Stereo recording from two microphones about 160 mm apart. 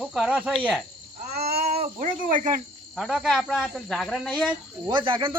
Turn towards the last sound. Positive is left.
turn(degrees=-30)  # may be behind; listen again after turning